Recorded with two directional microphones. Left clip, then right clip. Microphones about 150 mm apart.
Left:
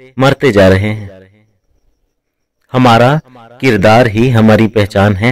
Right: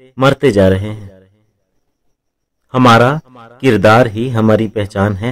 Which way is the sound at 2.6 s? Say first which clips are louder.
Left 1 dB; 30° left (ahead or behind).